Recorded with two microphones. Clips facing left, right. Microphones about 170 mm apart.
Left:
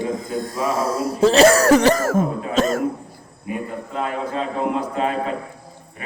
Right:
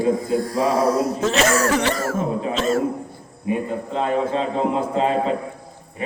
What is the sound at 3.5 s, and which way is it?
A man's voice, 25° right (ahead or behind).